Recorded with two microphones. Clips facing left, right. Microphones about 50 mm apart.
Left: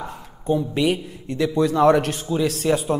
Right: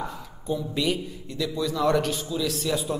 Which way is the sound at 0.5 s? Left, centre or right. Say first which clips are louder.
Left 6 dB; left.